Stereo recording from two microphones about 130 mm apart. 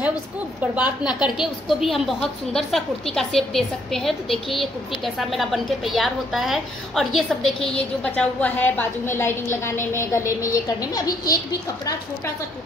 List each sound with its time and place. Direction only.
0.7 s a woman's voice: 10° right (ahead or behind); by 11.3 s 30° left (ahead or behind)